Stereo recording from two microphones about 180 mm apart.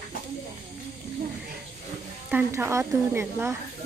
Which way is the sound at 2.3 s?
10° right (ahead or behind).